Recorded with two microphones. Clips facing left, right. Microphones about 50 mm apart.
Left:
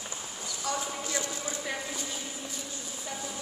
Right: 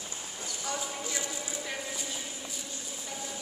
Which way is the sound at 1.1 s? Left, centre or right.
Centre.